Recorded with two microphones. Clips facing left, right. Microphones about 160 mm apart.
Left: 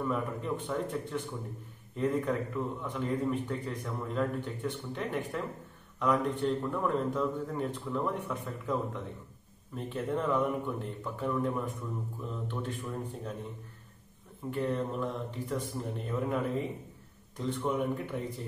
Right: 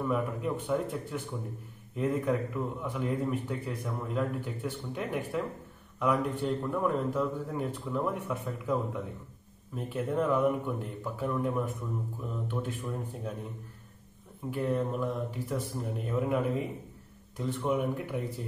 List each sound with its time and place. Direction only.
0.0 s a man's voice: 5° right (ahead or behind)
14.5 s a man's voice: 5° right (ahead or behind)